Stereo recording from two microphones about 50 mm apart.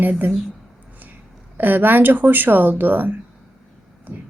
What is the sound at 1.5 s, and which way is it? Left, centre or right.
Speech, right.